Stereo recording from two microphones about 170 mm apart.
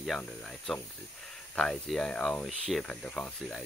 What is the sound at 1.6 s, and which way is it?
Speech, 5° left (ahead or behind).